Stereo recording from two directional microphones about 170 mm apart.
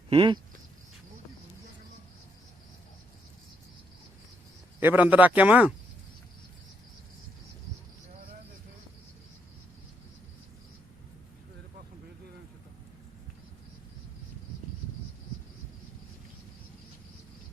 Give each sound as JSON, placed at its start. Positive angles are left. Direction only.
{"t": 0.1, "sound": "speech", "side_deg": -30}
{"t": 4.8, "sound": "speech", "side_deg": -10}